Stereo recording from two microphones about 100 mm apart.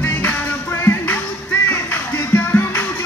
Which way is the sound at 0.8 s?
25° left (ahead or behind).